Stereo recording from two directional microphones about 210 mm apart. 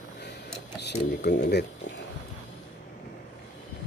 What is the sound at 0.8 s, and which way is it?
Speech, 50° left (ahead or behind).